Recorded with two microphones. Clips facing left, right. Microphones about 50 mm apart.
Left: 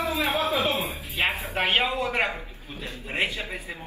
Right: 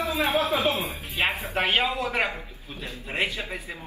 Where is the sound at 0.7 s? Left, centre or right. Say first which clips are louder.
Left 1 dB; left.